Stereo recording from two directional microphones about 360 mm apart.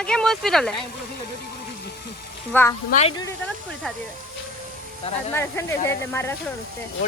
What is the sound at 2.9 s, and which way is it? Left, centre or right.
Speech, centre.